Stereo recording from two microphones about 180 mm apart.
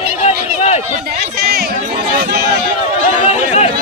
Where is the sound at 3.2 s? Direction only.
40° left (ahead or behind).